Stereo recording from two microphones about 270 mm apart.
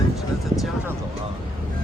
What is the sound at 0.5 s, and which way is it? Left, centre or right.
Speech, centre.